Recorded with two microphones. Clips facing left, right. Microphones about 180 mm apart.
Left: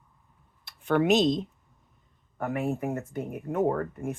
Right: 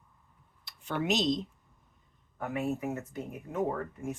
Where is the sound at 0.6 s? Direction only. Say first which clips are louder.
Left 9 dB; 60° left (ahead or behind).